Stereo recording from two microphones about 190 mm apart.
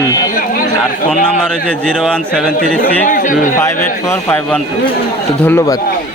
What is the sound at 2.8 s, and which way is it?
Speech, 45° left (ahead or behind).